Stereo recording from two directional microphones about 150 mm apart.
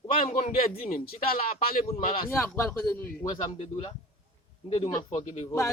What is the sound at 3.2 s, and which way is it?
Speech, 25° left (ahead or behind).